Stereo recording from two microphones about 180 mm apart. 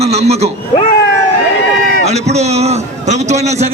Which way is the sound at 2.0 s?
40° right (ahead or behind).